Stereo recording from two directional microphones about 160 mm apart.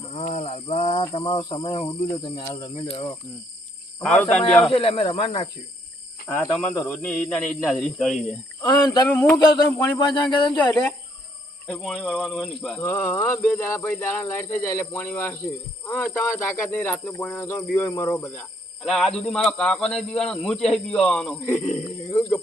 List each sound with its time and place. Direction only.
0.1 s a sound: 40° left (ahead or behind)
1.1 s speech: 35° left (ahead or behind)
4.0 s speech: 5° left (ahead or behind)
4.7 s speech: 40° left (ahead or behind)
6.2 s a man's voice: 15° left (ahead or behind)
8.6 s speech: 25° left (ahead or behind)
9.6 s speech: 10° left (ahead or behind)
10.0 s speech: 30° left (ahead or behind)
10.5 s a man's voice: 10° left (ahead or behind)
12.8 s a man's voice: 15° left (ahead or behind)
21.6 s speech: 45° left (ahead or behind)